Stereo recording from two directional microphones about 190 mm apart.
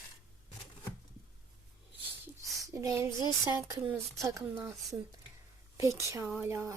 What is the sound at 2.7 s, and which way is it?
Speech, 15° right (ahead or behind).